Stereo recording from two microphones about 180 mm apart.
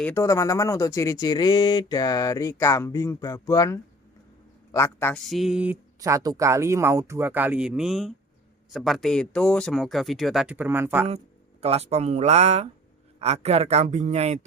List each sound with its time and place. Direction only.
0.0 s a woman's voice: 15° left (ahead or behind)
5.2 s speech: centre (ahead or behind)
6.0 s speech: 20° right (ahead or behind)
11.6 s a man's voice: 35° right (ahead or behind)